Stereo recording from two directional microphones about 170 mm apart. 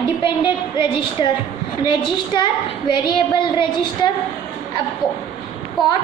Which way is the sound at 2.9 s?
25° left (ahead or behind).